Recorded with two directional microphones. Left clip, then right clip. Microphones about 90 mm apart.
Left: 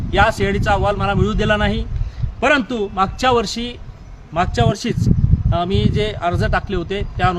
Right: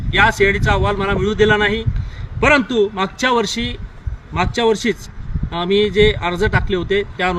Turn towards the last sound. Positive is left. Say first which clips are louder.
# right 2 dB
turn(degrees=40)  # may be behind; listen again after turning